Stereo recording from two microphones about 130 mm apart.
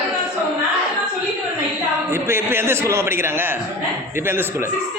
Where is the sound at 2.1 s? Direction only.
20° right (ahead or behind).